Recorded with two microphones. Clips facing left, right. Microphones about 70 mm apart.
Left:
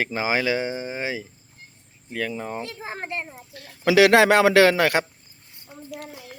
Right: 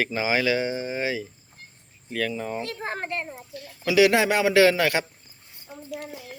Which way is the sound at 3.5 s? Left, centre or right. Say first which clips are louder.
Left 3 dB; left.